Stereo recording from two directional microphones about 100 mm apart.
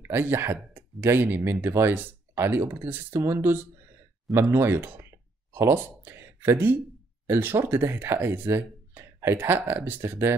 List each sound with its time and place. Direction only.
0.0 s speech: 25° right (ahead or behind)